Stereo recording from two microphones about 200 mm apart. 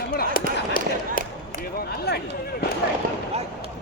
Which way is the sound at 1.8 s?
55° left (ahead or behind).